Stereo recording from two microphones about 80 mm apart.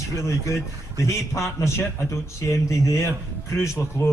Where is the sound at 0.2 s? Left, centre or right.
Left.